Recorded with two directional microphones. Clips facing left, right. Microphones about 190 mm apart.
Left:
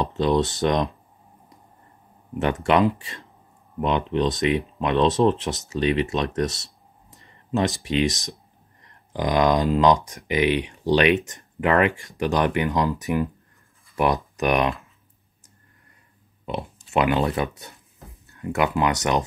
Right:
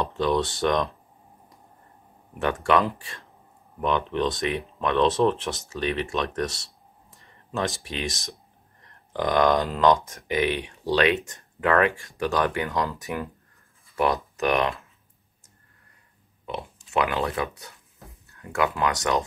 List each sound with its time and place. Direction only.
0.2 s speech: 20° left (ahead or behind)
2.3 s speech: 20° left (ahead or behind)
16.4 s speech: 20° left (ahead or behind)